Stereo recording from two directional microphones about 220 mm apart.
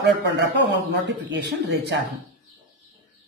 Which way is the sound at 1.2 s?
50° right (ahead or behind).